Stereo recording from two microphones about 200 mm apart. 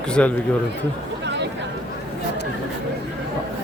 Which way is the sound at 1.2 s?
60° right (ahead or behind).